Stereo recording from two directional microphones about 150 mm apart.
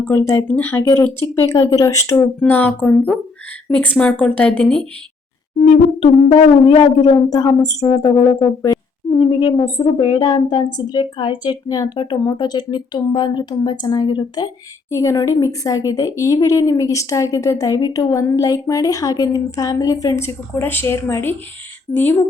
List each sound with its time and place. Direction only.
0.1 s a woman's voice: 20° left (ahead or behind)
1.2 s speech: 25° left (ahead or behind)
2.4 s a woman's voice: 10° left (ahead or behind)
5.5 s music: 45° left (ahead or behind)
7.3 s a woman's voice: 25° left (ahead or behind)